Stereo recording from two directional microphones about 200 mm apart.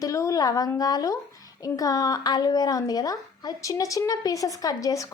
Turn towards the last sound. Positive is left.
turn(degrees=15)  # may be behind; listen again after turning